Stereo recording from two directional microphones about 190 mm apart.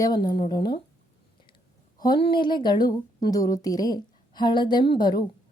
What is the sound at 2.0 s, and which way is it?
A woman's voice, 25° left (ahead or behind).